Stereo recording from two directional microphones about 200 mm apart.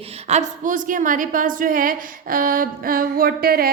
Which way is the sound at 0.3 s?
35° right (ahead or behind).